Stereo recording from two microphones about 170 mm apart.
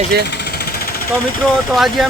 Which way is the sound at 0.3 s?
70° left (ahead or behind).